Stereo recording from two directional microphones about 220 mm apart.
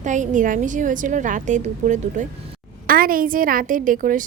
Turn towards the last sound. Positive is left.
turn(degrees=-40)  # may be behind; listen again after turning